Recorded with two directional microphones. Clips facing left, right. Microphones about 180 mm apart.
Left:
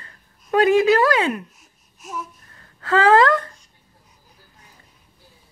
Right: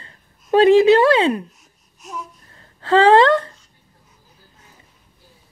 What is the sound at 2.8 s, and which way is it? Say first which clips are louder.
Speech: right 3 dB; 30° right (ahead or behind).